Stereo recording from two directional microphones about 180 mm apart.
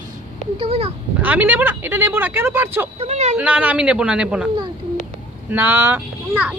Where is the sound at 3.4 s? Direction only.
10° right (ahead or behind).